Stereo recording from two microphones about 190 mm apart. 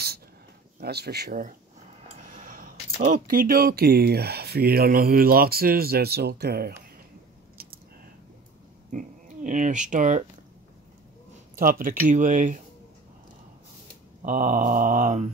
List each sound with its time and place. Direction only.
0.7 s speech: 60° right (ahead or behind)
7.6 s a sound: 55° right (ahead or behind)
8.9 s speech: 40° right (ahead or behind)
12.0 s speech: 40° right (ahead or behind)
14.2 s speech: 45° right (ahead or behind)